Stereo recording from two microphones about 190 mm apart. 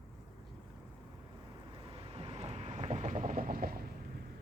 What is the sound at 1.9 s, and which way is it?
Vehicle, 30° right (ahead or behind).